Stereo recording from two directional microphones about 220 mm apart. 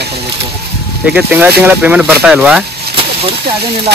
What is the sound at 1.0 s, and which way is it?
Speech, 5° right (ahead or behind).